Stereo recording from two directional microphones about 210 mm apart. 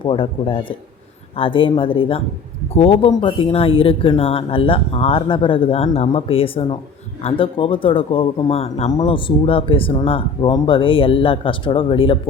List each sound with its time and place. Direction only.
0.0 s speech: 25° left (ahead or behind)